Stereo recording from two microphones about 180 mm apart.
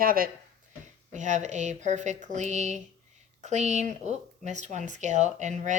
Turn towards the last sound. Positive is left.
turn(degrees=-40)  # may be behind; listen again after turning